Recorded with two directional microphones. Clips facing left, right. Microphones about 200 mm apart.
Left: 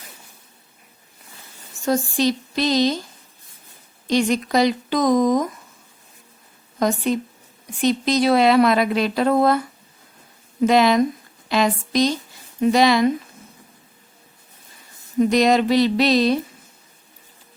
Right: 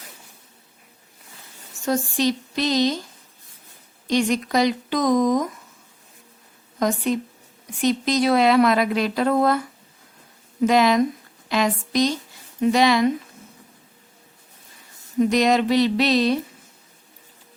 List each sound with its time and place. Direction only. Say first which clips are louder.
1.8 s speech: left 2 dB; 35° left (ahead or behind)
4.0 s speech: left 1 dB; 30° left (ahead or behind)
6.7 s a woman's voice: left 1 dB; 30° left (ahead or behind)
10.7 s a woman's voice: left 2 dB; 30° left (ahead or behind)
15.2 s speech: left 2 dB; 35° left (ahead or behind)